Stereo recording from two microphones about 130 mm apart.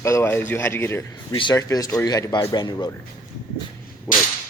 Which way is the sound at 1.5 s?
25° left (ahead or behind).